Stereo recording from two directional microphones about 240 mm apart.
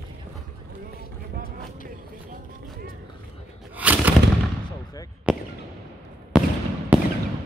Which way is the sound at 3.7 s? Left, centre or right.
Centre.